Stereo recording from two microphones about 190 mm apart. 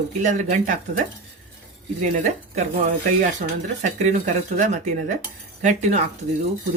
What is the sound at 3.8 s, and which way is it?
Speech, 40° right (ahead or behind).